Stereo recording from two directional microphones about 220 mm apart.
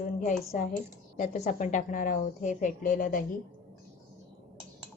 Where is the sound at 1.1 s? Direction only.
35° left (ahead or behind).